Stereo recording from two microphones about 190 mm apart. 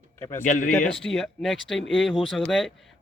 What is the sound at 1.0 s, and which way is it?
Speech, centre (ahead or behind).